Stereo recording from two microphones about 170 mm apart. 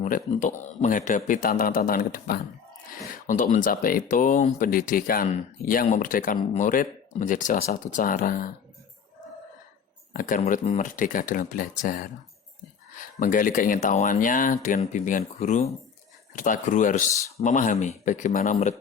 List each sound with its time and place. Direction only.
0.0 s a man's voice: 45° left (ahead or behind)
10.1 s a man's voice: 50° left (ahead or behind)
13.1 s a man's voice: 50° left (ahead or behind)